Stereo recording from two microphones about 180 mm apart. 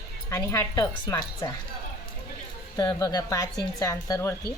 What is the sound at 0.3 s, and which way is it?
Speech, 15° left (ahead or behind).